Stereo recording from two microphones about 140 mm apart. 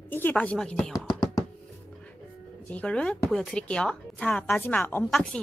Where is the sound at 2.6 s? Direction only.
10° left (ahead or behind).